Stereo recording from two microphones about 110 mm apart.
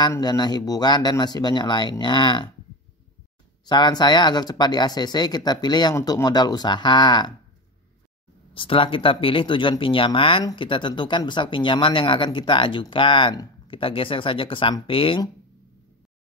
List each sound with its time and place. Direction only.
0.2 s speech: 40° left (ahead or behind)
3.6 s speech: 40° left (ahead or behind)
8.5 s speech: 50° left (ahead or behind)